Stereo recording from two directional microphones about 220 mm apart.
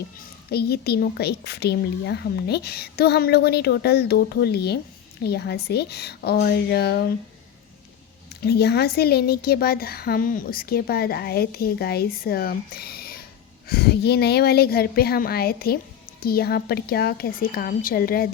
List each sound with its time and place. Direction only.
0.5 s speech: 45° left (ahead or behind)
8.3 s speech: 45° left (ahead or behind)